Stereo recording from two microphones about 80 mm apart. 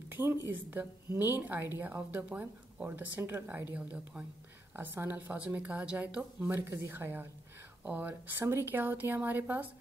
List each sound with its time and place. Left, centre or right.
0.1 s speech: right
4.7 s speech: right